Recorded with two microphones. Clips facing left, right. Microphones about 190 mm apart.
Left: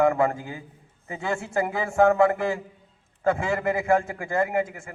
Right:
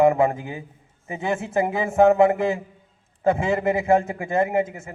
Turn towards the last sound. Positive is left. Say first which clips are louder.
# right 3 dB
turn(degrees=-20)  # may be behind; listen again after turning